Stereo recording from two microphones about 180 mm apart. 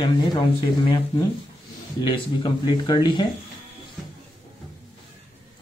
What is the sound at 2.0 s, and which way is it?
Speech, 25° left (ahead or behind).